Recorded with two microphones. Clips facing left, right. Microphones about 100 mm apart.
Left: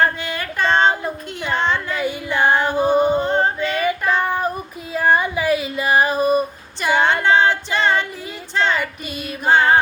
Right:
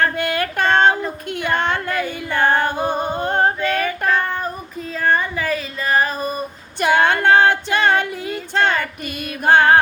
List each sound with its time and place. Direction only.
0.2 s female singing: 55° right (ahead or behind)
1.3 s a woman's voice: 55° right (ahead or behind)
2.0 s music: 15° left (ahead or behind)
2.5 s female singing: 50° right (ahead or behind)
3.2 s singing: 50° right (ahead or behind)
3.8 s child singing: 10° left (ahead or behind)
4.9 s female singing: 10° left (ahead or behind)
6.7 s female singing: 55° right (ahead or behind)
9.4 s music: 55° right (ahead or behind)